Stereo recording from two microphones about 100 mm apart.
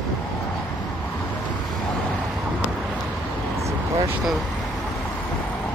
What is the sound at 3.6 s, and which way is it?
Vehicle, 30° right (ahead or behind).